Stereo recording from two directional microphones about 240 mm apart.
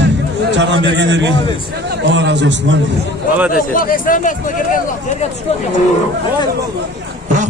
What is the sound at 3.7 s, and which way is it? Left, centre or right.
Speech, left.